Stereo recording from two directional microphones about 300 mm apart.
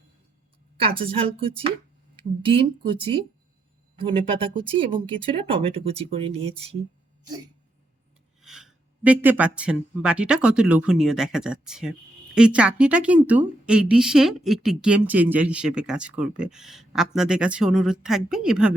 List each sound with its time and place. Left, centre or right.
0.8 s speech: centre
8.4 s speech: centre